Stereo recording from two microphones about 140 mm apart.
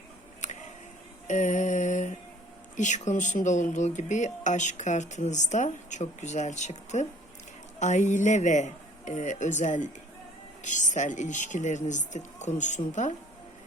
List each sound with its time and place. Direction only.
0.4 s a sound: 55° left (ahead or behind)
1.3 s mantra: 65° left (ahead or behind)
2.7 s speech: 60° left (ahead or behind)